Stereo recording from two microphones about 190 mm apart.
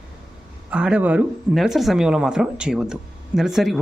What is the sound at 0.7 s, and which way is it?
Speech, 5° right (ahead or behind).